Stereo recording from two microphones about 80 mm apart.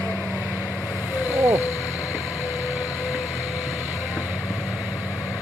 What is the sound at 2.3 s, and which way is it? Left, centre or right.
Vehicle, left.